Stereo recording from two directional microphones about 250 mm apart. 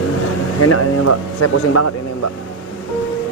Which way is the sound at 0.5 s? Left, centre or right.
Left.